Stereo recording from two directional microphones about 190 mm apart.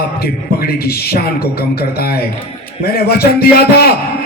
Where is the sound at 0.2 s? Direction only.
55° left (ahead or behind).